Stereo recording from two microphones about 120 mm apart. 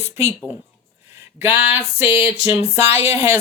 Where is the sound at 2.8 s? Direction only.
20° right (ahead or behind).